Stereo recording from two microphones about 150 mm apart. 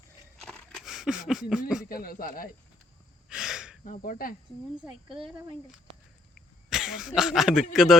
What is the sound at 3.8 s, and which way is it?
Speech, 65° left (ahead or behind).